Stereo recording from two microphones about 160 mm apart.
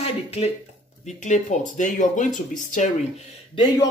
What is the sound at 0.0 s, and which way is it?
Speech, 40° left (ahead or behind).